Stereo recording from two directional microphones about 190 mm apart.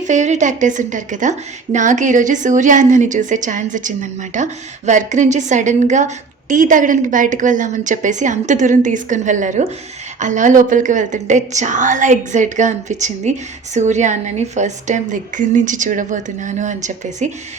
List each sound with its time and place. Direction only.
0.0 s a woman's voice: 40° right (ahead or behind)